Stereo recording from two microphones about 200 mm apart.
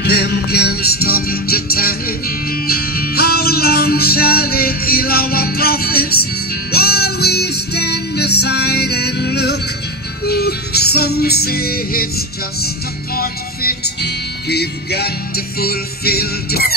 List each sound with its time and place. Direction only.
0.0 s music: 55° left (ahead or behind)